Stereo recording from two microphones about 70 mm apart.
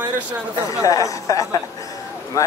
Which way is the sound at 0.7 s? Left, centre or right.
Left.